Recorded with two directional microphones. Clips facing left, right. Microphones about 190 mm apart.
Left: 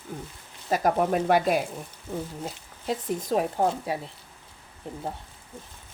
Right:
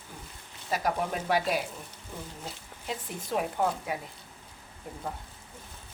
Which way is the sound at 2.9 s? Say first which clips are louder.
Left 7 dB; 40° left (ahead or behind).